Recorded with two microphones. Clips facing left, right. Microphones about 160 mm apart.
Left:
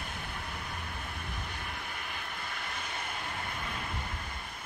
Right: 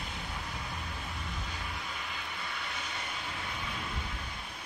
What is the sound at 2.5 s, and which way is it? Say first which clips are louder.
Vehicle: even; 55° left (ahead or behind).